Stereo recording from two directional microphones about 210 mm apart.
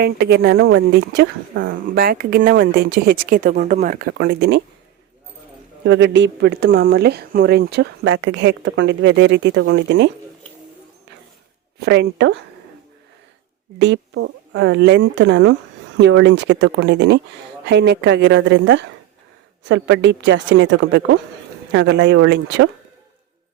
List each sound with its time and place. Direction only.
0.0 s speech: 50° right (ahead or behind)
5.8 s a woman's voice: 60° right (ahead or behind)
11.9 s a woman's voice: 55° right (ahead or behind)
13.7 s a woman's voice: 55° right (ahead or behind)